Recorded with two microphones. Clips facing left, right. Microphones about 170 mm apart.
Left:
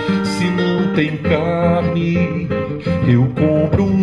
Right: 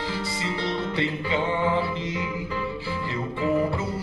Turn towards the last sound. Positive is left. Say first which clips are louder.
# left 10 dB
turn(degrees=65)  # may be behind; listen again after turning